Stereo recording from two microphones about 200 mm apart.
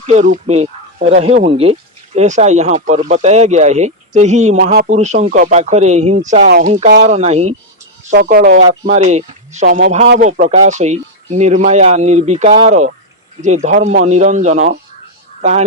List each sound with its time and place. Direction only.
0.1 s speech: 35° right (ahead or behind)
8.1 s speech: 55° right (ahead or behind)
8.9 s speech: 35° right (ahead or behind)
9.6 s speech: 50° right (ahead or behind)